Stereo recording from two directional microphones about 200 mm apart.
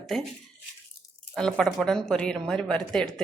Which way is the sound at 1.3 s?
5° left (ahead or behind).